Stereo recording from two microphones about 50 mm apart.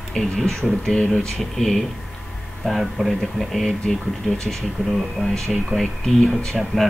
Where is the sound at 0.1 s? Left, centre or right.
Centre.